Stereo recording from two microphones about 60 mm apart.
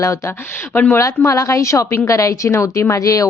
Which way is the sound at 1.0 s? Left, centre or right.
Left.